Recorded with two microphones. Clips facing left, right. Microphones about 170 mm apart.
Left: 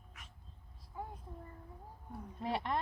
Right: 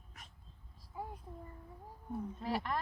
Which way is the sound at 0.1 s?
40° right (ahead or behind).